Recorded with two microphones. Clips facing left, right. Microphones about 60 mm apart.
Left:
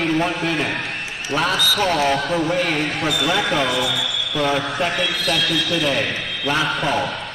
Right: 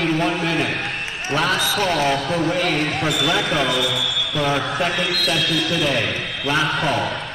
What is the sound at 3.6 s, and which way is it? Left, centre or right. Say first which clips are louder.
Speech: even; left.